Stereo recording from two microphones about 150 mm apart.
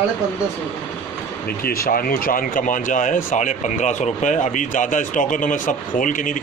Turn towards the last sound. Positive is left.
turn(degrees=60)  # may be behind; listen again after turning